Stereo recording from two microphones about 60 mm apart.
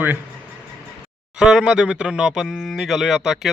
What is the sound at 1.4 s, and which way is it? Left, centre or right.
Speech, centre.